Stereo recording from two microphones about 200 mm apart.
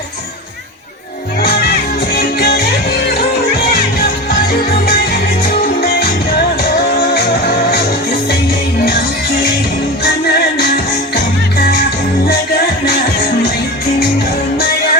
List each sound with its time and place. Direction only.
1.4 s music: 50° left (ahead or behind)
5.4 s music: 50° left (ahead or behind)
7.1 s music: 50° left (ahead or behind)
8.8 s music: 50° left (ahead or behind)